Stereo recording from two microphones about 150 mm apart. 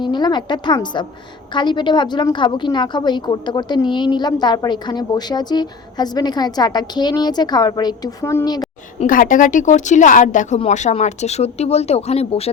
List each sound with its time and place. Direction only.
0.0 s a woman's voice: 30° left (ahead or behind)
9.0 s speech: 65° left (ahead or behind); by 12.5 s 40° left (ahead or behind)